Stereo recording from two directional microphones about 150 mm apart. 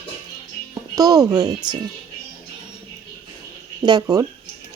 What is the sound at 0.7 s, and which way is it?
Speech, 25° right (ahead or behind).